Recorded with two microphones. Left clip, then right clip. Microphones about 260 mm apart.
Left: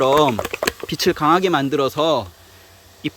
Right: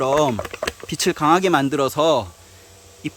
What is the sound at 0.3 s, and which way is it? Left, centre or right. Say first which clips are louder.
Typing: left 4 dB; left.